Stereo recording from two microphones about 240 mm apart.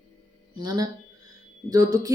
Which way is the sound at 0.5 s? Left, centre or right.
Centre.